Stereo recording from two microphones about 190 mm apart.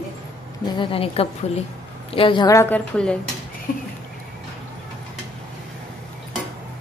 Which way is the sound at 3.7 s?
45° left (ahead or behind).